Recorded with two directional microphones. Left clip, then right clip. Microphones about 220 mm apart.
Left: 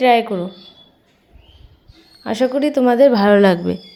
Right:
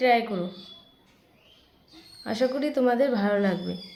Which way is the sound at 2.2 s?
30° left (ahead or behind).